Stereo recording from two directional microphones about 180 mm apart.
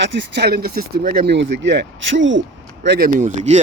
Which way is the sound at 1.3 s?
80° right.